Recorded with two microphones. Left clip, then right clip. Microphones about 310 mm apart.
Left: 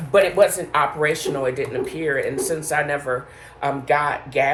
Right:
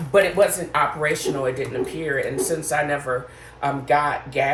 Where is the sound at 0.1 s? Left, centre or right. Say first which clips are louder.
Left 2 dB; centre.